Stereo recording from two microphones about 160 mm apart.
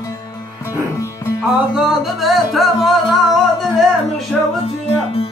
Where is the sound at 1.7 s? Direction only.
5° right (ahead or behind).